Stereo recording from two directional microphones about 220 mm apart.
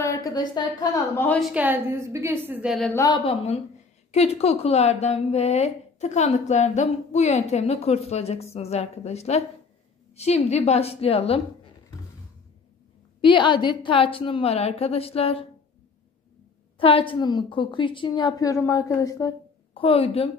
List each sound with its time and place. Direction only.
0.0 s a woman's voice: 15° left (ahead or behind)
1.5 s a woman's voice: 10° right (ahead or behind)
2.9 s a woman's voice: 15° left (ahead or behind)
3.3 s a woman's voice: 30° left (ahead or behind)
13.2 s a woman's voice: 20° left (ahead or behind)
16.7 s a woman's voice: 25° left (ahead or behind)